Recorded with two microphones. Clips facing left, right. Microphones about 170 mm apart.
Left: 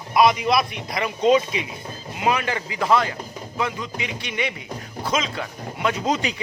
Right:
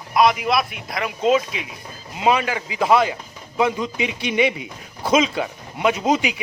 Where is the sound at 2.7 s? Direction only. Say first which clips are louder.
Right 3 dB; 15° right (ahead or behind).